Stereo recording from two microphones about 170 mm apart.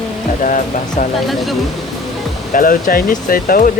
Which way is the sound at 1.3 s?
Centre (ahead or behind).